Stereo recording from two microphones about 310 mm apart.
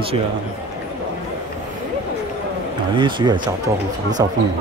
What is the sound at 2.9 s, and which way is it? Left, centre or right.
Speech, centre.